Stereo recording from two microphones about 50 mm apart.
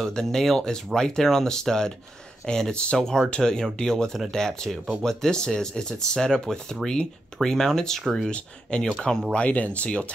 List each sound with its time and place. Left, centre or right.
0.0 s speech: centre
8.3 s speech: centre